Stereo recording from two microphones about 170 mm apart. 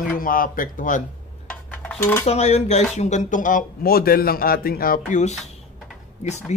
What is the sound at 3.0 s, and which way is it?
A man's voice, 45° left (ahead or behind).